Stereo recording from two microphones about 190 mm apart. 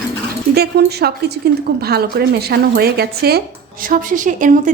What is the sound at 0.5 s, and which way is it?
A woman's voice, 55° right (ahead or behind).